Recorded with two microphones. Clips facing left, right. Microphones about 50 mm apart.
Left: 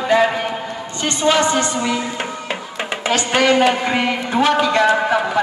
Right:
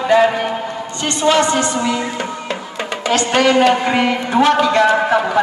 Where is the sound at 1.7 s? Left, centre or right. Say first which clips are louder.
Right 2 dB; centre.